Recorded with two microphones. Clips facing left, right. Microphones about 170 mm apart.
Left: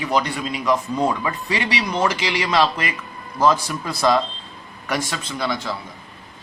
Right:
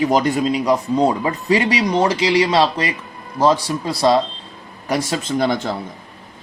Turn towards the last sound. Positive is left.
turn(degrees=-50)  # may be behind; listen again after turning